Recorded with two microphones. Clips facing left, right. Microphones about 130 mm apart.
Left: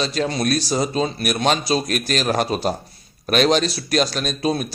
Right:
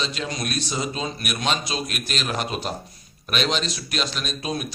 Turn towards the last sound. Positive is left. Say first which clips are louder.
# left 7 dB
turn(degrees=40)  # may be behind; listen again after turning